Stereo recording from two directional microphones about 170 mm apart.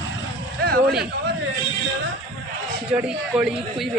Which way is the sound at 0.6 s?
65° right (ahead or behind).